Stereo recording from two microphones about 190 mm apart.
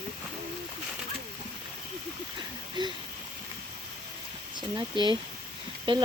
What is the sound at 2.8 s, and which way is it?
Speech, 25° right (ahead or behind).